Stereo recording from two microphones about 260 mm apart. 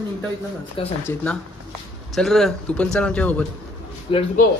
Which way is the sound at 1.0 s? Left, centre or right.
Centre.